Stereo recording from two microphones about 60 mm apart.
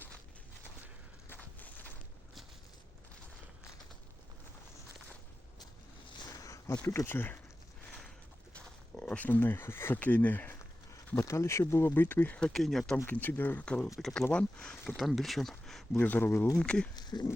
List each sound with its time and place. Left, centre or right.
1.3 s a sound: left
6.4 s a sound: left
6.8 s speech: left
8.5 s a sound: left
10.0 s speech: left
11.3 s speech: left
11.9 s speech: left
12.4 s speech: centre
13.1 s speech: left
13.7 s speech: centre
14.8 s speech: centre
16.0 s speech: left
16.6 s speech: centre
17.1 s speech: left